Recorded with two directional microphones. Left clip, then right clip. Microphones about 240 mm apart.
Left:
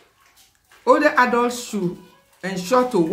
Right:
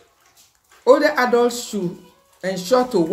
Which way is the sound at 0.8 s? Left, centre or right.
Centre.